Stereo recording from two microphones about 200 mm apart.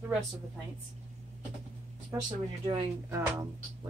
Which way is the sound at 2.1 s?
20° right (ahead or behind).